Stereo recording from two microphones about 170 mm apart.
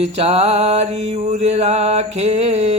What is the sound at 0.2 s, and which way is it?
A man's voice, 35° right (ahead or behind).